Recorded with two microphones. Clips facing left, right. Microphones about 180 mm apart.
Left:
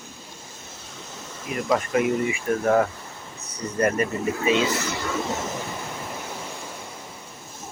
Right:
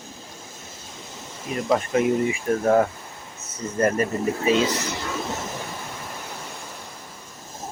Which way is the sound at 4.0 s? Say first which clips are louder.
Right 1 dB; 40° right (ahead or behind).